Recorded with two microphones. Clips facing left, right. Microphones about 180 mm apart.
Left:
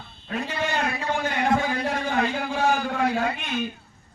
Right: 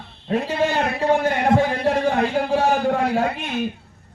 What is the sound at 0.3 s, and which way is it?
Speech, 35° right (ahead or behind).